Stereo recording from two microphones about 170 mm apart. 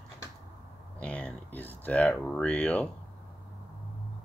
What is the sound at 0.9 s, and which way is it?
Speech, 5° left (ahead or behind).